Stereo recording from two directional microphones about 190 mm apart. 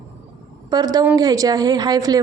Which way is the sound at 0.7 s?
20° right (ahead or behind).